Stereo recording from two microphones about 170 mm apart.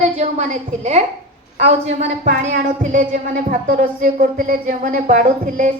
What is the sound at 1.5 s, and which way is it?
Speech, 40° right (ahead or behind).